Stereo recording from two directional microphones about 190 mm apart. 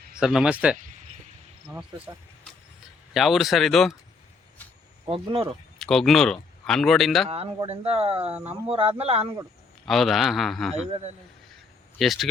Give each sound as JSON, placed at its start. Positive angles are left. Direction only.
{"t": 0.2, "sound": "a man's voice", "side_deg": -5}
{"t": 3.1, "sound": "a man's voice", "side_deg": 0}
{"t": 5.0, "sound": "speech", "side_deg": -30}
{"t": 5.8, "sound": "speech", "side_deg": 0}
{"t": 7.3, "sound": "speech", "side_deg": -30}
{"t": 9.8, "sound": "a man's voice", "side_deg": 0}
{"t": 11.9, "sound": "a man's voice", "side_deg": 0}